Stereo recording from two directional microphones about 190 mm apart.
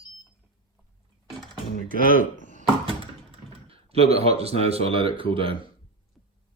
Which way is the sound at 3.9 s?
30° right (ahead or behind).